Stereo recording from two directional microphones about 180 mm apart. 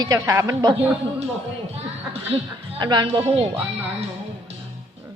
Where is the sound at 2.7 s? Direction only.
25° right (ahead or behind).